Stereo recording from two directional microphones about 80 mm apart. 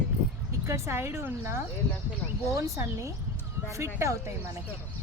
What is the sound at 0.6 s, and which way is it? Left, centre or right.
Speech, right.